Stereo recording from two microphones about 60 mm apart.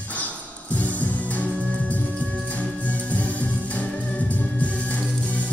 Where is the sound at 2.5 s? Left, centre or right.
Left.